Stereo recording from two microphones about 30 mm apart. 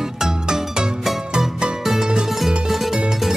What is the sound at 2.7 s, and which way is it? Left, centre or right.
Music, centre.